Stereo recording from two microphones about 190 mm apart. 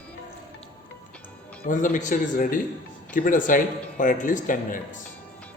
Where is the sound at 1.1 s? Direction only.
5° left (ahead or behind).